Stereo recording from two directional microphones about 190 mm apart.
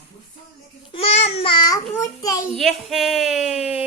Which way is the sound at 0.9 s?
35° left (ahead or behind).